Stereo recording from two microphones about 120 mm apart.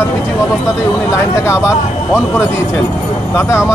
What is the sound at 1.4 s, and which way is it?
Speech, 25° left (ahead or behind).